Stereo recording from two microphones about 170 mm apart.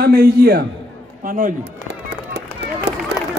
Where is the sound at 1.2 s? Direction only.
50° right (ahead or behind).